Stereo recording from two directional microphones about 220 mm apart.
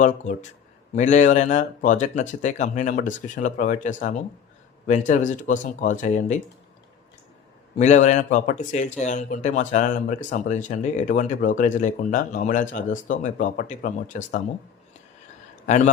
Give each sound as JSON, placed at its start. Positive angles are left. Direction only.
{"t": 0.0, "sound": "speech", "side_deg": 35}
{"t": 7.8, "sound": "speech", "side_deg": 35}
{"t": 15.6, "sound": "a man's voice", "side_deg": 35}